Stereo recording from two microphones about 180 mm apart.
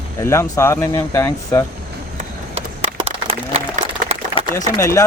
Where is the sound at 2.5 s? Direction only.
35° right (ahead or behind).